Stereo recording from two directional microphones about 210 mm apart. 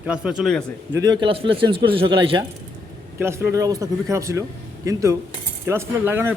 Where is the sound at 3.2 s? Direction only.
10° right (ahead or behind).